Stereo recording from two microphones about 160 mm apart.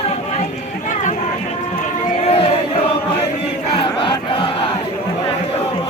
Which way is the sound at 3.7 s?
30° left (ahead or behind).